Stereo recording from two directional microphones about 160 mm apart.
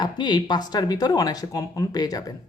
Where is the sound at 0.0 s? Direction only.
30° left (ahead or behind).